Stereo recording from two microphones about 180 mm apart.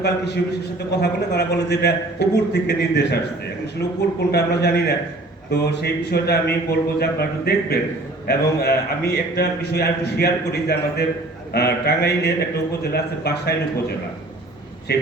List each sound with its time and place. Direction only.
0.9 s a man's voice: 65° left (ahead or behind)
4.3 s a man's voice: 65° left (ahead or behind)
14.9 s a man's voice: 65° left (ahead or behind)